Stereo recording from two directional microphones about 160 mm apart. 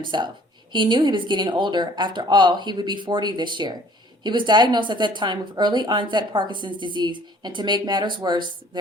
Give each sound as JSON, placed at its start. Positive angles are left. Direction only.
{"t": 0.0, "sound": "a woman's voice", "side_deg": -30}